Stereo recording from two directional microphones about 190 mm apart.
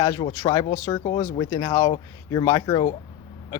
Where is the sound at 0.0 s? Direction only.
20° left (ahead or behind).